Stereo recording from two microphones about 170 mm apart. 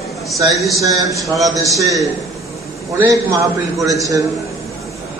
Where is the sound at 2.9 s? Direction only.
20° right (ahead or behind).